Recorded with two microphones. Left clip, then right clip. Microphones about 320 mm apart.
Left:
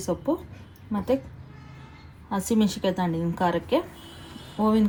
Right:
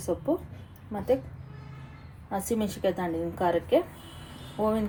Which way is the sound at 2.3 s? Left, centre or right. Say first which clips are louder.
Left 4 dB; left.